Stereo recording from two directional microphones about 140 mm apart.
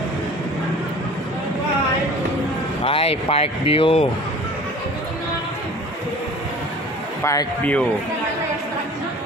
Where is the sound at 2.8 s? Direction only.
45° left (ahead or behind).